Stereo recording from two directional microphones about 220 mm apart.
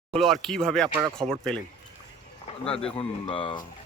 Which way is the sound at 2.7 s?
25° left (ahead or behind).